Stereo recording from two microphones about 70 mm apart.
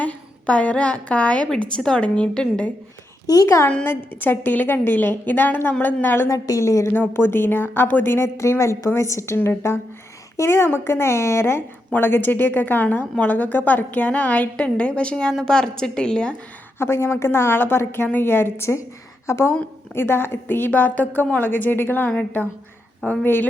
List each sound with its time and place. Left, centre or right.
0.0 s a woman's voice: centre
3.2 s a woman's voice: left
3.8 s a woman's voice: left
6.3 s a woman's voice: left
6.9 s a woman's voice: left; by 16.3 s centre
16.7 s a woman's voice: left